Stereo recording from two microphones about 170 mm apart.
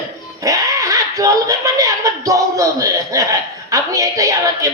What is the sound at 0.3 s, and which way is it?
A man's voice, 20° right (ahead or behind).